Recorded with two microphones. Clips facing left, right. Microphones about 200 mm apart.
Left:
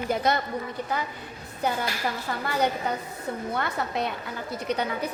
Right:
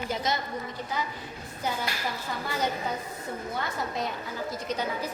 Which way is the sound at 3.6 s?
65° left (ahead or behind).